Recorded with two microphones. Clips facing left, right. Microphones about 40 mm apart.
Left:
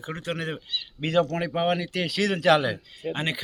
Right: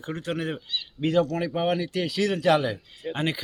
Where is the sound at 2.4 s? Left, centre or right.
Left.